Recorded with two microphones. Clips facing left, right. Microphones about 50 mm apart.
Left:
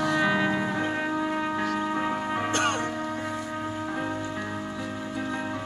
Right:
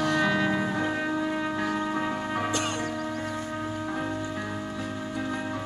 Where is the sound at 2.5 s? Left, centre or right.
Left.